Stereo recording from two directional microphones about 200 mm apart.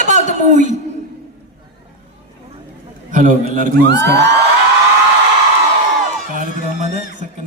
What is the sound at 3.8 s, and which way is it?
Speech, 60° right (ahead or behind).